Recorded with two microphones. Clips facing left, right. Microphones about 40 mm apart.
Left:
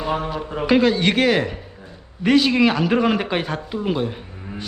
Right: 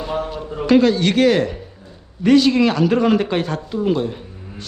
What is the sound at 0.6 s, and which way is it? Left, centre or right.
A man's voice, centre.